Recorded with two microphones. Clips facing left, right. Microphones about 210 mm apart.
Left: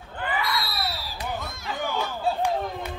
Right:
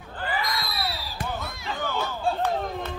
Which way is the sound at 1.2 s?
50° right (ahead or behind).